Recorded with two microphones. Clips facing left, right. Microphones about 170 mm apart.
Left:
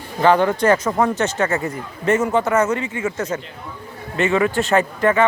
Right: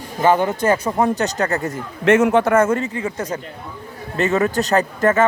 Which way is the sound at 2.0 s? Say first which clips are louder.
Right 4 dB; 75° right (ahead or behind).